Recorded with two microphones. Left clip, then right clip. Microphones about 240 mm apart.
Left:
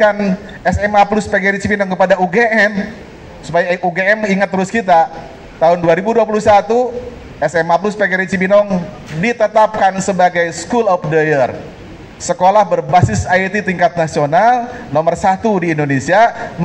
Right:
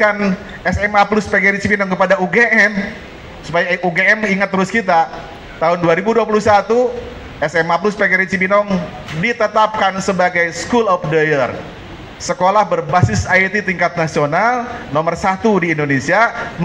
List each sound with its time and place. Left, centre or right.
0.0 s a man's voice: left